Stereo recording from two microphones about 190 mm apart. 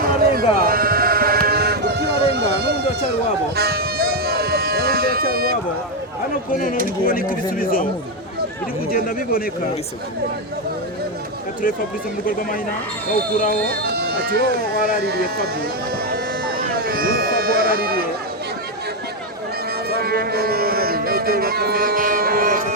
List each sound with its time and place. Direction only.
0.0 s sheep: 50° right (ahead or behind)
3.5 s music: 55° right (ahead or behind)
6.5 s speech: 45° left (ahead or behind)
8.9 s speech: 50° left (ahead or behind)
13.3 s speech: 45° left (ahead or behind)
13.7 s speech: 55° right (ahead or behind)
16.0 s a sound: 55° right (ahead or behind)
19.9 s music: 55° right (ahead or behind)